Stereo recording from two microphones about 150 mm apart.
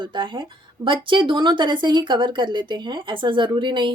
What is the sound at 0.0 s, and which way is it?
Speech, 35° right (ahead or behind).